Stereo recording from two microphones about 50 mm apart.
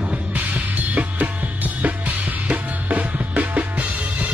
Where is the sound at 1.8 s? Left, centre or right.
Right.